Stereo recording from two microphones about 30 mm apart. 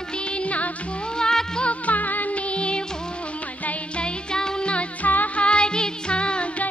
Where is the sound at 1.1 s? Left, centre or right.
Left.